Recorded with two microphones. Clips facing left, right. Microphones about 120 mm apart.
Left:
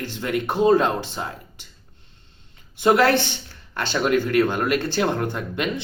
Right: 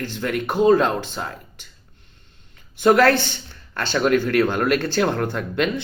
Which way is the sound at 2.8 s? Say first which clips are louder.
Right 2 dB; 20° left (ahead or behind).